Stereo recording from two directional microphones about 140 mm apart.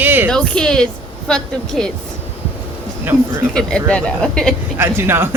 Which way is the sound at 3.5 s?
5° left (ahead or behind).